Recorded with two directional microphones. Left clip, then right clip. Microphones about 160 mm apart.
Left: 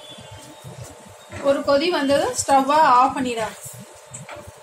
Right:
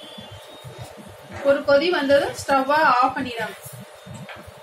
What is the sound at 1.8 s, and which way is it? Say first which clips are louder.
Speech: right 1 dB; 50° left (ahead or behind).